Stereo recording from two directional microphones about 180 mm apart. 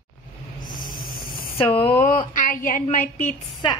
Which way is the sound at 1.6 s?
30° left (ahead or behind).